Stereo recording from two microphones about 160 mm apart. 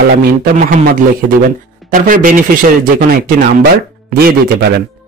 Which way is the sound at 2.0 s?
60° right (ahead or behind).